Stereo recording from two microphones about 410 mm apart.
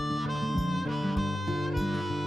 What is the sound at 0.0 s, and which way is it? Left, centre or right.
Harmonica, centre.